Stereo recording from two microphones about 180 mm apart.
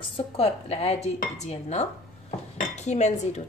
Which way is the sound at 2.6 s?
40° left (ahead or behind).